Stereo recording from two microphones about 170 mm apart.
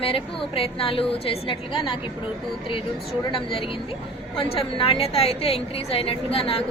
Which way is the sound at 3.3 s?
35° left (ahead or behind).